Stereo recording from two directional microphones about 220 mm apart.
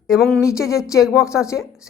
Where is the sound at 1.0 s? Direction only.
Centre (ahead or behind).